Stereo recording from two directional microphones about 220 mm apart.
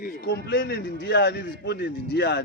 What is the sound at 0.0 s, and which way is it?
A man's voice, 45° left (ahead or behind).